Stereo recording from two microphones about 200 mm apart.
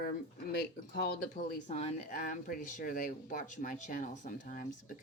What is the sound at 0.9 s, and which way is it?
Speech, 50° left (ahead or behind).